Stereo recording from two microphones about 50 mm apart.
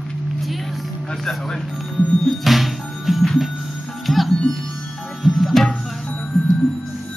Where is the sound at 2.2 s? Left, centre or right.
Centre.